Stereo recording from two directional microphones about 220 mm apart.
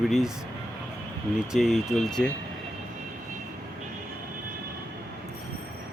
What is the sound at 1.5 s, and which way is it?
Speech, centre (ahead or behind).